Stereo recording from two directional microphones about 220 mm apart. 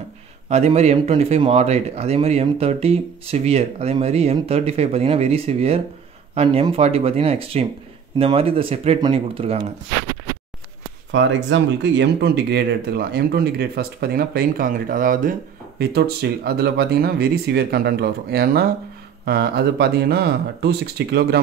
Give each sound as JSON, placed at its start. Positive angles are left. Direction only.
{"t": 0.5, "sound": "speech", "side_deg": -30}
{"t": 11.1, "sound": "speech", "side_deg": -55}